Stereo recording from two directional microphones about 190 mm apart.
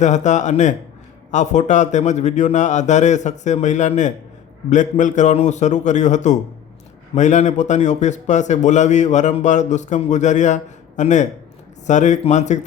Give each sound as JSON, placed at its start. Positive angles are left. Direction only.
{"t": 0.0, "sound": "a man's voice", "side_deg": 40}